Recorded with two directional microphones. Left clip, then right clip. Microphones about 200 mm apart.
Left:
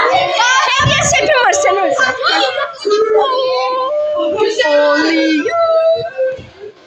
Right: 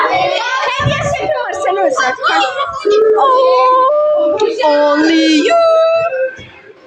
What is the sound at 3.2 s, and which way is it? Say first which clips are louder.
Child singing: right 5 dB; 20° right (ahead or behind).